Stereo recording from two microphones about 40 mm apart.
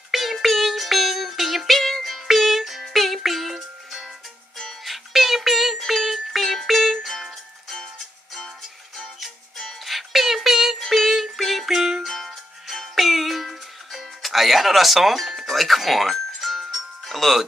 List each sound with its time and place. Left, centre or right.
0.1 s music: centre
9.6 s music: centre